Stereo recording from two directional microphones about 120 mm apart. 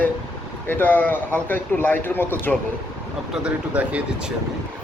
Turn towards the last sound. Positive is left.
turn(degrees=-10)  # may be behind; listen again after turning